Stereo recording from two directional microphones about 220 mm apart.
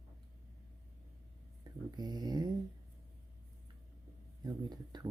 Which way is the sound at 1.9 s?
20° right (ahead or behind).